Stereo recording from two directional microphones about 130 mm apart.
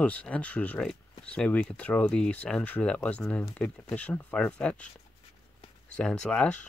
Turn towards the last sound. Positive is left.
turn(degrees=5)  # may be behind; listen again after turning